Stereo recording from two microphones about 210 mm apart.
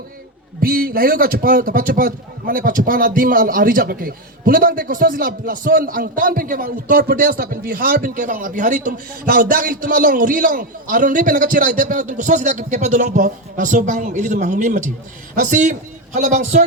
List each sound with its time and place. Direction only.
0.6 s a man's voice: 45° right (ahead or behind)